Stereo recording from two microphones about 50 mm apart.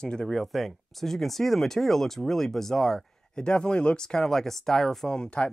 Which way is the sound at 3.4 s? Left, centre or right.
Centre.